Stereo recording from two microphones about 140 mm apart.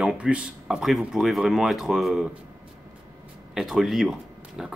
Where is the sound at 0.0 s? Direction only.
5° right (ahead or behind).